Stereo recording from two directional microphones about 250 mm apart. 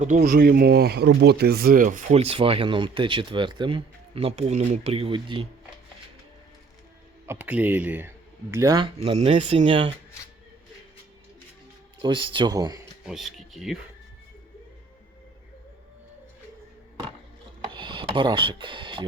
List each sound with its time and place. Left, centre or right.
0.0 s speech: right
7.3 s speech: centre
12.0 s speech: centre
13.1 s speech: centre
17.6 s rub: centre